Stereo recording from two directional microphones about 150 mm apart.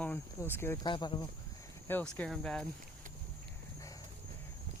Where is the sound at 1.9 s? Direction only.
10° left (ahead or behind).